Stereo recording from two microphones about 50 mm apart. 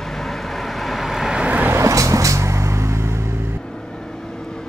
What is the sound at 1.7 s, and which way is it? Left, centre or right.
Vehicle, right.